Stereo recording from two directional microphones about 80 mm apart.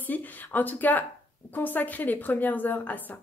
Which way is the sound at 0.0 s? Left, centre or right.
Left.